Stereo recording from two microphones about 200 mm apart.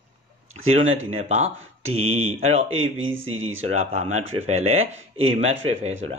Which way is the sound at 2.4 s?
30° right (ahead or behind).